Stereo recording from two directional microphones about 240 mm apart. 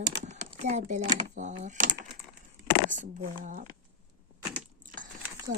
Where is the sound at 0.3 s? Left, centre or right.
Right.